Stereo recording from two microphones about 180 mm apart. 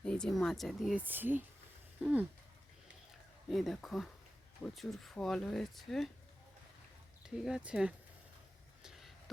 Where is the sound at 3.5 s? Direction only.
Centre (ahead or behind).